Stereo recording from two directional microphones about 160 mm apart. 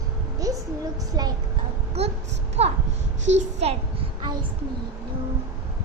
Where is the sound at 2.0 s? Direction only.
40° right (ahead or behind).